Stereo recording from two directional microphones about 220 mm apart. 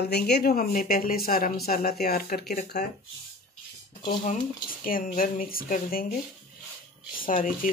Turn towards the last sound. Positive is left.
turn(degrees=40)  # may be behind; listen again after turning